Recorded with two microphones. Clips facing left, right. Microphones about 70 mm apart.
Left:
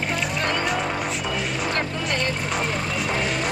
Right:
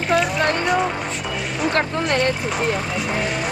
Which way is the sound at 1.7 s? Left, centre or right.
Right.